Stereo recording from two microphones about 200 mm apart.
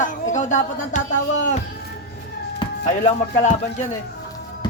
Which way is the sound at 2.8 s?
35° left (ahead or behind).